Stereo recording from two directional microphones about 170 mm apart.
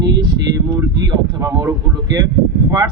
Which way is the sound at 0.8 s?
20° right (ahead or behind).